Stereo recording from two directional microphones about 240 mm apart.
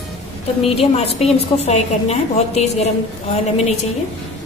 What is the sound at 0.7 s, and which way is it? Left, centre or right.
A woman's voice, left.